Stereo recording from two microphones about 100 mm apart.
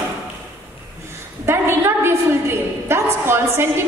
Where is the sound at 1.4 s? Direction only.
25° right (ahead or behind).